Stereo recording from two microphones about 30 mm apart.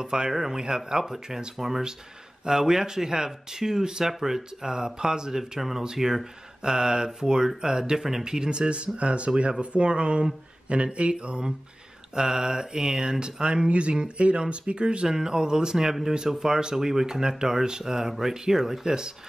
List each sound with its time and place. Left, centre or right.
0.0 s speech: right
5.9 s speech: centre
6.6 s speech: right
12.2 s speech: right
13.7 s speech: right
15.0 s speech: centre